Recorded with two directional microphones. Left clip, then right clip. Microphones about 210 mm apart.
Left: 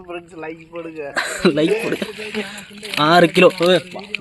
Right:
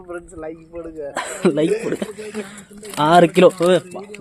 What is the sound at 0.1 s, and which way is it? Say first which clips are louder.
A man's voice: left 1 dB; 20° left (ahead or behind).